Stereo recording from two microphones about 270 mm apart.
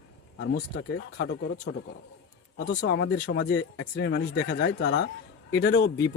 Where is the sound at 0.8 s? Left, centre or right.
Left.